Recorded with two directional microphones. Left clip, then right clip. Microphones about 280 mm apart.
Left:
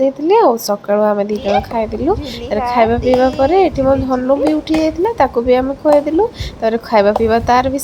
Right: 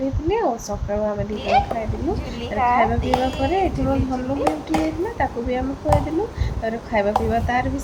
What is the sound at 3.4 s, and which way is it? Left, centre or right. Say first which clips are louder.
A woman's voice: left 9 dB; centre.